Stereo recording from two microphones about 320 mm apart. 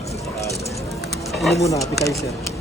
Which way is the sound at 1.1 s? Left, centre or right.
Centre.